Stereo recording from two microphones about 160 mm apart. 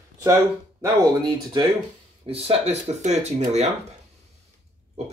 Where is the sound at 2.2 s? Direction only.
35° right (ahead or behind).